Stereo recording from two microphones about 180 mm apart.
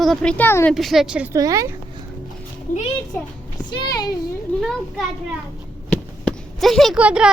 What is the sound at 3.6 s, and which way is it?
Speech, 25° left (ahead or behind).